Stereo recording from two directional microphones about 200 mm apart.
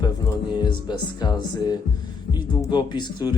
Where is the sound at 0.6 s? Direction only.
20° left (ahead or behind).